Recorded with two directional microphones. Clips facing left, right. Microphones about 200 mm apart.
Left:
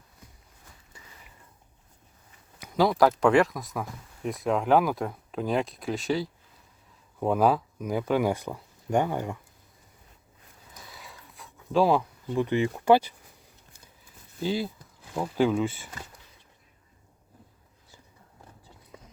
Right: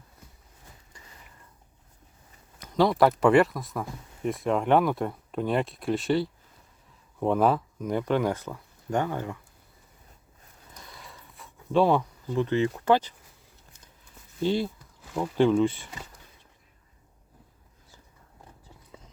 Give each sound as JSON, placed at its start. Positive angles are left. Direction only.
{"t": 2.6, "sound": "speech", "side_deg": 5}
{"t": 10.9, "sound": "a sound", "side_deg": 0}
{"t": 14.4, "sound": "speech", "side_deg": 0}